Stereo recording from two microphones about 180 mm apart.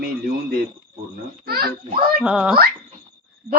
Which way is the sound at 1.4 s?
60° right (ahead or behind).